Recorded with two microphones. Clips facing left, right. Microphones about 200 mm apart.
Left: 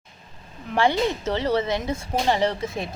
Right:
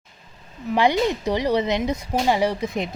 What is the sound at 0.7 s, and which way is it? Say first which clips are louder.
Speech: right 2 dB; 15° right (ahead or behind).